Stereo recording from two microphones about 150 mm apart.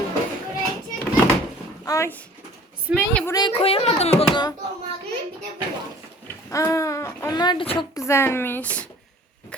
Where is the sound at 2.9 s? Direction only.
10° right (ahead or behind).